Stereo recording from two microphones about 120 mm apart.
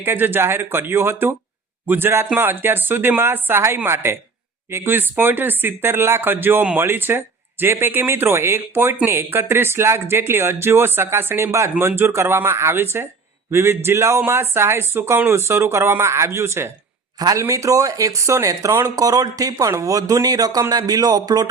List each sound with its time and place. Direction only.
0.0 s speech: 15° right (ahead or behind)
17.2 s a man's voice: 30° right (ahead or behind)